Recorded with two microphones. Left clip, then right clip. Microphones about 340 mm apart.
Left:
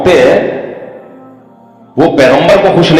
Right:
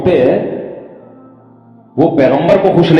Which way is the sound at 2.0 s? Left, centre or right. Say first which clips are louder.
Left 4 dB; left.